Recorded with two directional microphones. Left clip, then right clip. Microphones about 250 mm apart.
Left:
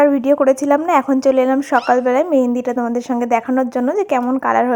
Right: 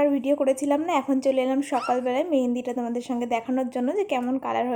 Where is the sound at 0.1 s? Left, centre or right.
Centre.